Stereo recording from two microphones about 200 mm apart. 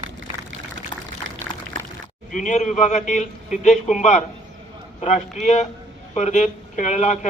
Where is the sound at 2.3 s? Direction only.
40° left (ahead or behind).